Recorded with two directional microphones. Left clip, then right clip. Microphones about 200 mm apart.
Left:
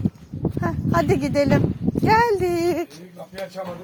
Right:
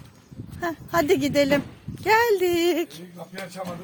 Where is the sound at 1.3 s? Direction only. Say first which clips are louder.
Left 1 dB; 10° right (ahead or behind).